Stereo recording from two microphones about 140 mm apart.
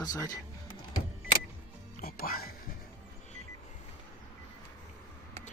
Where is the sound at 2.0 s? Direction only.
90° left.